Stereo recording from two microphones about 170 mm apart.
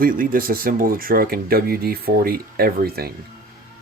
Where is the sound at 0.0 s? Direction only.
55° right (ahead or behind).